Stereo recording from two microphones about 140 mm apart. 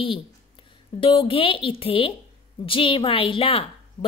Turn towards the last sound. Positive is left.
turn(degrees=40)  # may be behind; listen again after turning